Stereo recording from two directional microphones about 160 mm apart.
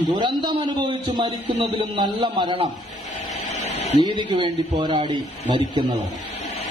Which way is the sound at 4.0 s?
30° right (ahead or behind).